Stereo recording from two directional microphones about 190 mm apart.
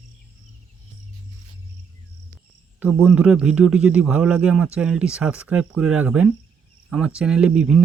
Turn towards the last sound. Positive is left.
turn(degrees=-5)  # may be behind; listen again after turning